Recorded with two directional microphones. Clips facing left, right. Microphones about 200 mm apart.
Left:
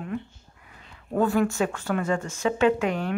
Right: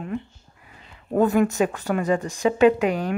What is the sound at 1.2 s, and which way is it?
Speech, 20° right (ahead or behind).